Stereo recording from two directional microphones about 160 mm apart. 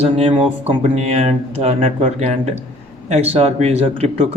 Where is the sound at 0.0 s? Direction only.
40° right (ahead or behind).